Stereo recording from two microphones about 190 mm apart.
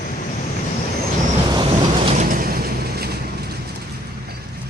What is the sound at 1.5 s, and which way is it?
Vehicle, 25° right (ahead or behind).